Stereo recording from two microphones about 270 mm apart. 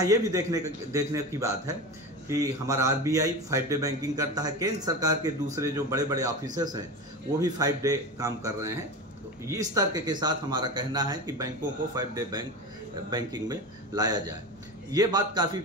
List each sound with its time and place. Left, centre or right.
0.0 s speech: centre